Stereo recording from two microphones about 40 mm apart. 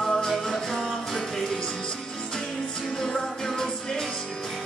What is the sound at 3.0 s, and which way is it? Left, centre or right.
Music, centre.